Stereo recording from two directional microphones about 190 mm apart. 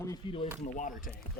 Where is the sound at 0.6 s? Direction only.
45° left (ahead or behind).